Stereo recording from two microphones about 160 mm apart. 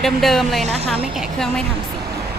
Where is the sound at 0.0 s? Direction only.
Centre (ahead or behind).